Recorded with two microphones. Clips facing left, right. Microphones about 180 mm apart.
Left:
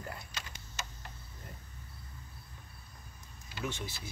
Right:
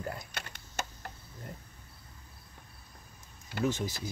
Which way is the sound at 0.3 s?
60° right (ahead or behind).